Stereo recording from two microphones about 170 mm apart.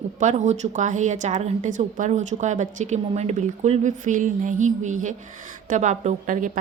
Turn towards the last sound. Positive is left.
turn(degrees=-50)  # may be behind; listen again after turning